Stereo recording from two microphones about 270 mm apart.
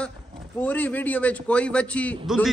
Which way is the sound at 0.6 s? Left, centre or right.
Centre.